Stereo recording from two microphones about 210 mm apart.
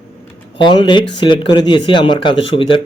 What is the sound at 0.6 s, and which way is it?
Speech, 20° left (ahead or behind).